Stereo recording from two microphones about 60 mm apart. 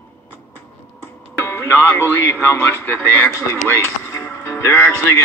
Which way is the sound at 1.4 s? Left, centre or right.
Left.